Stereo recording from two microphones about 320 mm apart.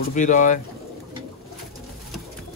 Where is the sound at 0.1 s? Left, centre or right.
Left.